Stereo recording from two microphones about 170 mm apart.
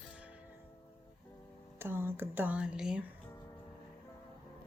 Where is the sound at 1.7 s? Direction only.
15° right (ahead or behind).